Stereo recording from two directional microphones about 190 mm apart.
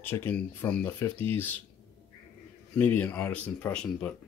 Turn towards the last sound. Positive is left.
turn(degrees=5)  # may be behind; listen again after turning